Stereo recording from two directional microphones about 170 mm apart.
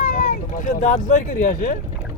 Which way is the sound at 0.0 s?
50° left (ahead or behind).